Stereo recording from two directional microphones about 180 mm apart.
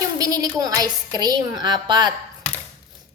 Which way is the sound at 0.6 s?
20° right (ahead or behind).